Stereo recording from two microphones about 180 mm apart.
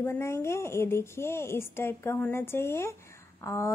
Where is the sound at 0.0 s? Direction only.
15° left (ahead or behind).